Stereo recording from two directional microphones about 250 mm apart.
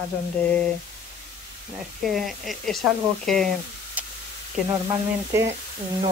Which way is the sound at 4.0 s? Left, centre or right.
Centre.